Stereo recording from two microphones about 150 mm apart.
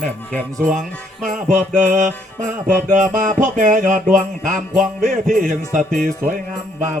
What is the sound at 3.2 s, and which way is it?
Music, 60° right (ahead or behind).